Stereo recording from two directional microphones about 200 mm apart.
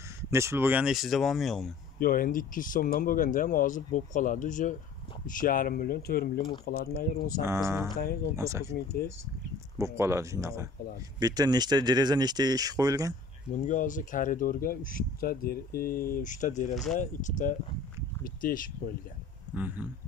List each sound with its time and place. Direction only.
0.3 s speech: 15° right (ahead or behind)
2.0 s speech: 45° left (ahead or behind)
7.4 s speech: 15° right (ahead or behind)
9.8 s speech: 15° right (ahead or behind)
13.5 s speech: 40° left (ahead or behind)
19.5 s speech: 10° right (ahead or behind)